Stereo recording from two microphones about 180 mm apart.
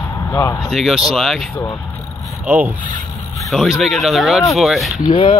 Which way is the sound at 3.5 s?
Centre (ahead or behind).